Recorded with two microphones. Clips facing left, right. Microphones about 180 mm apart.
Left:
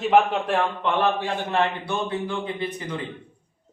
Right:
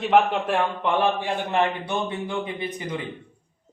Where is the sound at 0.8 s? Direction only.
10° right (ahead or behind).